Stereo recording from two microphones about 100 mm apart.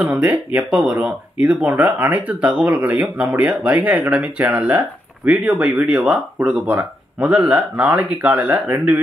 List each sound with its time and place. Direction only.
0.0 s speech: 15° right (ahead or behind)